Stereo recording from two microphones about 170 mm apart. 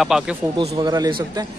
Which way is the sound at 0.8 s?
25° right (ahead or behind).